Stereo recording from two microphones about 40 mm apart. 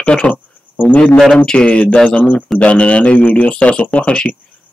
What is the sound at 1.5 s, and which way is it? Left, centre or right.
Speech, left.